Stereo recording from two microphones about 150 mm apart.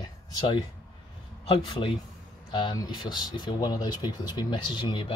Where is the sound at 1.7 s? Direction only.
35° left (ahead or behind).